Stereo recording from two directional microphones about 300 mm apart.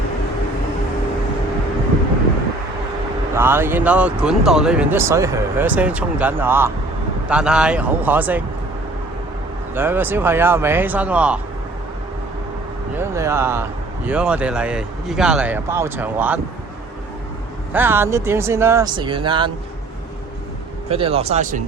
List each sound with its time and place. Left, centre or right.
3.3 s speech: centre
9.7 s speech: centre
13.0 s speech: centre
17.7 s speech: centre
20.9 s speech: centre